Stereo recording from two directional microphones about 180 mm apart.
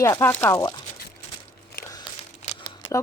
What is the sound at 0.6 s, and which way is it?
Speech, 25° left (ahead or behind).